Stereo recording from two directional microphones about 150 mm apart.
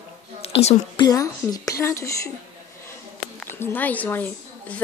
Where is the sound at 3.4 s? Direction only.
15° left (ahead or behind).